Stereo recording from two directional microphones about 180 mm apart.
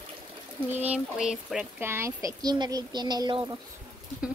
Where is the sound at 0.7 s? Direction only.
10° right (ahead or behind); by 3.5 s 25° right (ahead or behind).